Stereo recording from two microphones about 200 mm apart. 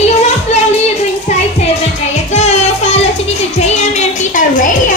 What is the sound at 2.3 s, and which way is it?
Child singing, 35° left (ahead or behind).